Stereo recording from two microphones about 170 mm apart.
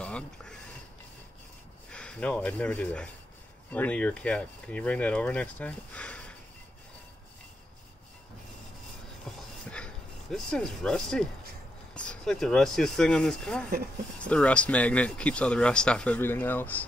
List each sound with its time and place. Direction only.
0.0 s a sound: 5° left (ahead or behind)
1.9 s speech: 5° left (ahead or behind)
10.3 s speech: 5° left (ahead or behind)